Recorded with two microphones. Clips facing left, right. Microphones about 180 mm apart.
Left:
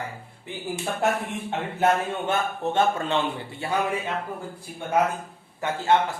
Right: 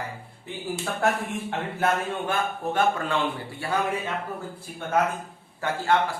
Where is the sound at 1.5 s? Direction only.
20° left (ahead or behind).